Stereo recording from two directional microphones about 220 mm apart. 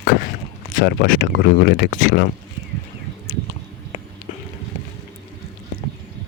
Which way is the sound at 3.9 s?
35° left (ahead or behind).